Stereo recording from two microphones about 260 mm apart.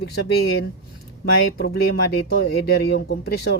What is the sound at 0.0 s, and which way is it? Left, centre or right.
Speech, left.